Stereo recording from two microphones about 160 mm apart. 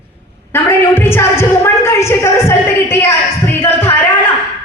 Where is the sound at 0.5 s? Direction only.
15° left (ahead or behind).